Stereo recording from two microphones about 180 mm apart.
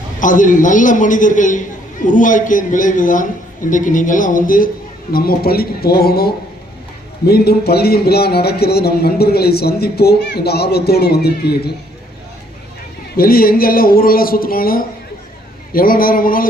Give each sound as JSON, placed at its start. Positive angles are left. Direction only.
{"t": 0.2, "sound": "a man's voice", "side_deg": 45}
{"t": 13.1, "sound": "a man's voice", "side_deg": 55}